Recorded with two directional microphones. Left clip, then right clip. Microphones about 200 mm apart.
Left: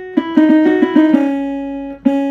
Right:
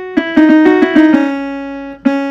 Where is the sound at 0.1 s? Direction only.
50° right (ahead or behind).